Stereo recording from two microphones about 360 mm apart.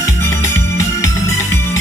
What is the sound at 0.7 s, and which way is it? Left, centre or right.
Music, centre.